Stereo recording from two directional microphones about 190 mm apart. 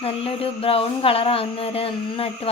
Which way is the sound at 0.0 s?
30° left (ahead or behind).